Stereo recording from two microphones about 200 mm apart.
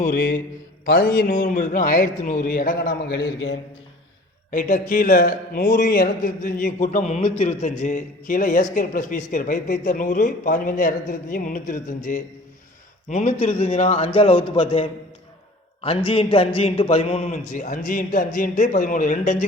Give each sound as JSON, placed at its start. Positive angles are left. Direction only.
{"t": 0.0, "sound": "a man's voice", "side_deg": 45}
{"t": 4.5, "sound": "a man's voice", "side_deg": 40}